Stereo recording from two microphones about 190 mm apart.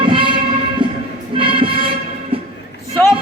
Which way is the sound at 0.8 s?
25° right (ahead or behind).